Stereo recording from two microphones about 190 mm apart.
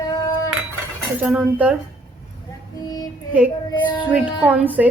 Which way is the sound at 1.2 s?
5° right (ahead or behind).